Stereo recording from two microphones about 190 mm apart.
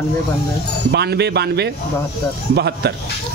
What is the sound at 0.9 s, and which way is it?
A man's voice, 60° right (ahead or behind).